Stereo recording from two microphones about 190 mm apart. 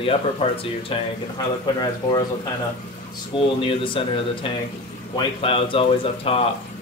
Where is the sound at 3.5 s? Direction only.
25° left (ahead or behind).